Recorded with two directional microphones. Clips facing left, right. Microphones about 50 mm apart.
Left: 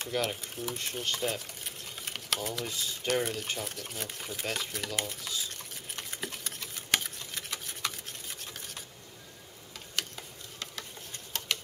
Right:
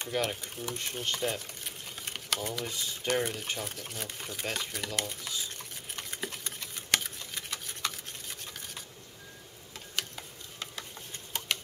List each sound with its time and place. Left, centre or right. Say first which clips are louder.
0.0 s speech: even; centre
3.3 s a sound: left 1 dB; centre
9.9 s ratchet: even; centre
11.3 s tick-tock: right 1 dB; centre